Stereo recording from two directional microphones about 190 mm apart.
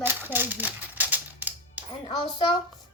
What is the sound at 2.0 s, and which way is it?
Speech, 25° left (ahead or behind).